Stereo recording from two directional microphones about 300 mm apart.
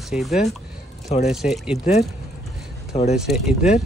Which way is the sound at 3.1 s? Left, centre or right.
Centre.